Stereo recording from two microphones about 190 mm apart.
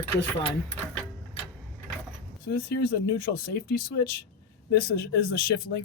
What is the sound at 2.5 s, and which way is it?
Speech, 55° left (ahead or behind).